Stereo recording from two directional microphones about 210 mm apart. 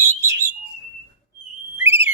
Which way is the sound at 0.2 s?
15° right (ahead or behind).